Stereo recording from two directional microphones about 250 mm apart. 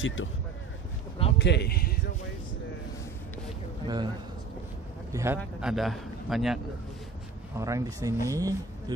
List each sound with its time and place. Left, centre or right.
0.0 s speech: left
1.4 s a man's voice: left
3.8 s a man's voice: centre
5.1 s a man's voice: centre
7.5 s speech: centre